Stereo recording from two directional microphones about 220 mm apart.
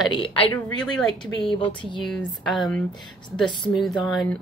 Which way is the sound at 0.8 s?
Centre (ahead or behind).